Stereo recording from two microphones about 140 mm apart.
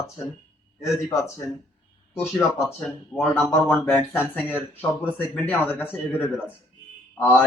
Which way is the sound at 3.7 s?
15° left (ahead or behind).